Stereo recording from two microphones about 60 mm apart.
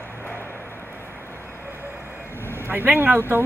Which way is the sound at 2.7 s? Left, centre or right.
Right.